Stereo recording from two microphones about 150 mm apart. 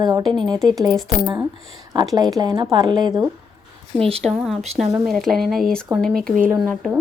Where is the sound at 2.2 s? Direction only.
25° right (ahead or behind).